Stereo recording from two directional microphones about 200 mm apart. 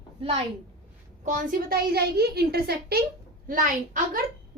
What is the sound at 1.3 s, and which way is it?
Speech, 50° right (ahead or behind).